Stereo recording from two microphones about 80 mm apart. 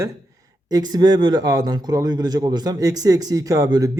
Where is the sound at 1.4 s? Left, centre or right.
Right.